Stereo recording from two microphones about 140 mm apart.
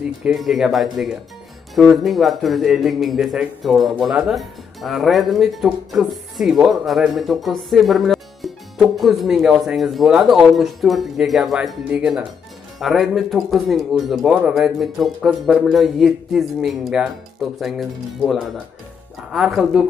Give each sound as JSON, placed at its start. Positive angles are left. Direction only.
{"t": 0.2, "sound": "speech", "side_deg": -5}